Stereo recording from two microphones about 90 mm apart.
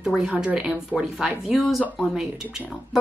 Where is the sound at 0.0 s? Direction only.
5° right (ahead or behind).